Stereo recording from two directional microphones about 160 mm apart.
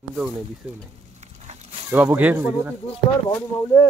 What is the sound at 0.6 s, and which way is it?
Speech, 5° right (ahead or behind).